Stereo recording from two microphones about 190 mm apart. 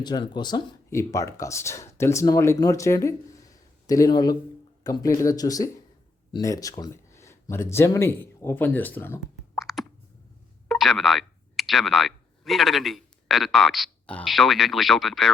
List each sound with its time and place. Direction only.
0.0 s speech: 20° left (ahead or behind)
9.6 s plop: centre (ahead or behind)
10.7 s speech: centre (ahead or behind)